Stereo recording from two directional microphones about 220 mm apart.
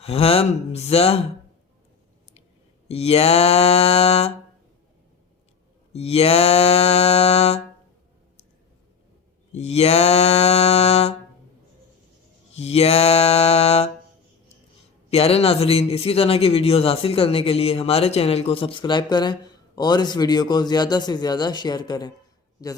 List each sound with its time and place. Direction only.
0.0 s a man's voice: 25° left (ahead or behind)
2.9 s a man's voice: 25° left (ahead or behind)
5.9 s a man's voice: 30° left (ahead or behind)
9.5 s a man's voice: 30° left (ahead or behind)
12.5 s a man's voice: 30° left (ahead or behind)
15.1 s a man's voice: 25° left (ahead or behind)